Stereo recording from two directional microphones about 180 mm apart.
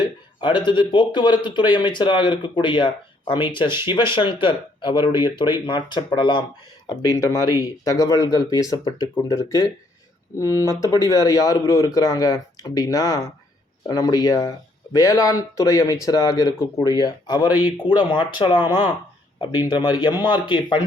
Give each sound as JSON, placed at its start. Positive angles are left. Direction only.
{"t": 0.0, "sound": "speech", "side_deg": 25}
{"t": 17.5, "sound": "speech", "side_deg": -10}
{"t": 18.1, "sound": "speech", "side_deg": 25}
{"t": 19.7, "sound": "speech", "side_deg": 25}